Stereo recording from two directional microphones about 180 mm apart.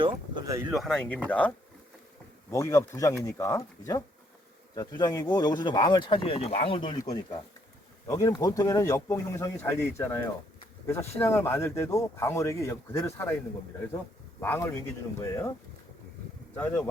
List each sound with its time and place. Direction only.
0.0 s speech: 20° right (ahead or behind)
0.7 s speech: centre (ahead or behind)
14.4 s speech: 10° left (ahead or behind)
16.6 s speech: 10° left (ahead or behind)